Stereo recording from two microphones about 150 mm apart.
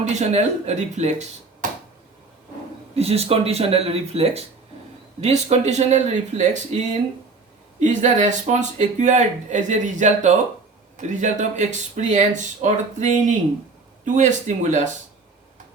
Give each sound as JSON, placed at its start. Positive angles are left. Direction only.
{"t": 0.0, "sound": "speech", "side_deg": -50}
{"t": 1.6, "sound": "a sound", "side_deg": -60}
{"t": 2.9, "sound": "speech", "side_deg": -45}